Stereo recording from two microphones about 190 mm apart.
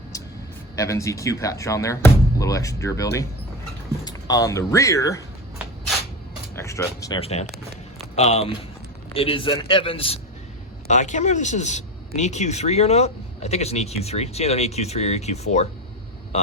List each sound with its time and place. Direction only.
0.8 s speech: 15° left (ahead or behind)
6.6 s speech: 15° left (ahead or behind)
7.2 s a man's voice: 35° left (ahead or behind)